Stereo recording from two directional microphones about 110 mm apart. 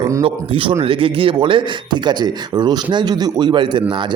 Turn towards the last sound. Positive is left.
turn(degrees=-45)  # may be behind; listen again after turning